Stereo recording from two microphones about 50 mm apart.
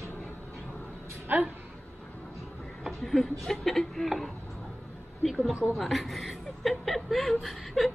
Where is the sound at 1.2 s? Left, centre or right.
Right.